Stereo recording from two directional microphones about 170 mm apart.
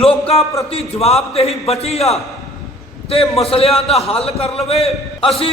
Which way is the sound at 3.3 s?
35° left (ahead or behind).